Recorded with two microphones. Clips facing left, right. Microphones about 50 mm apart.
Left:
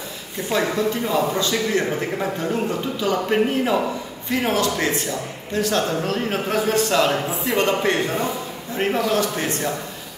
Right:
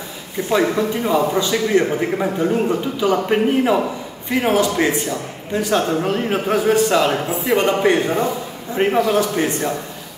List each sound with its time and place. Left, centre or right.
0.5 s a man's voice: centre